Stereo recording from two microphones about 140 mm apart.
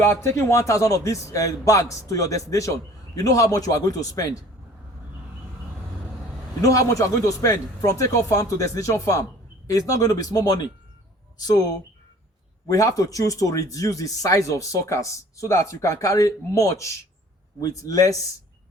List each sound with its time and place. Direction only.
0.2 s speech: 20° left (ahead or behind)
6.6 s speech: 25° left (ahead or behind)
12.6 s speech: 25° left (ahead or behind)